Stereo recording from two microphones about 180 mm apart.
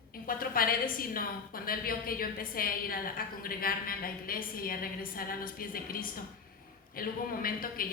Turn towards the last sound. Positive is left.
turn(degrees=55)  # may be behind; listen again after turning